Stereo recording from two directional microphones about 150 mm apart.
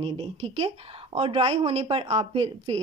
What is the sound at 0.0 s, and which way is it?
Speech, 40° right (ahead or behind).